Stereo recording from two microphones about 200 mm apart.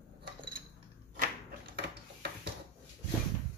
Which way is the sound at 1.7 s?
55° right (ahead or behind).